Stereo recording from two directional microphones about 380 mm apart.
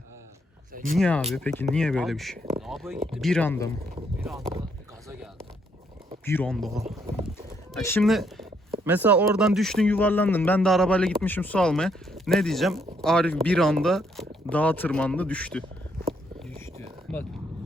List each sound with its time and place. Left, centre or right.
0.7 s a sound: right
0.9 s speech: centre
3.9 s speech: centre
6.2 s speech: centre
16.0 s a sound: centre
17.1 s vehicle: centre